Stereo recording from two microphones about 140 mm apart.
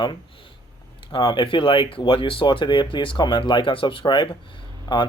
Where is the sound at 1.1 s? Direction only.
35° left (ahead or behind).